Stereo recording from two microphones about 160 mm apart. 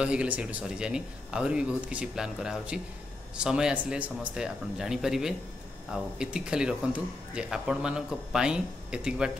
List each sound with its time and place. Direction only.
0.0 s speech: 5° right (ahead or behind)